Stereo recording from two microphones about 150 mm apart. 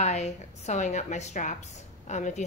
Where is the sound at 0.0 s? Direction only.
50° left (ahead or behind).